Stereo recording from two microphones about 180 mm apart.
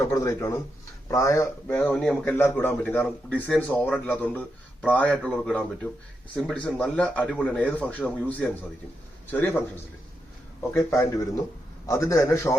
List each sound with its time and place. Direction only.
0.0 s speech: 15° left (ahead or behind)
10.8 s speech: 15° left (ahead or behind)